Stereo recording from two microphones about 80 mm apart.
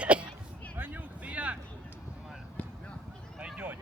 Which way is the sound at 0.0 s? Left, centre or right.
Centre.